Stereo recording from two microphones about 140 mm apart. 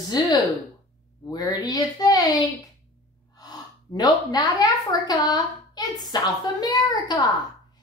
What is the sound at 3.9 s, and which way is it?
A woman's voice, 30° left (ahead or behind).